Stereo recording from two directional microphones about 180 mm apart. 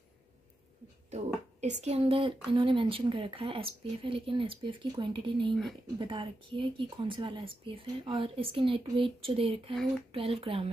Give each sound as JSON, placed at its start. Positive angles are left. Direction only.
{"t": 1.1, "sound": "speech", "side_deg": -40}